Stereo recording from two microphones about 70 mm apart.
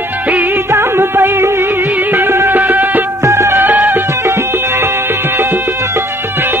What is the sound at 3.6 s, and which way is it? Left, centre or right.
Music, right.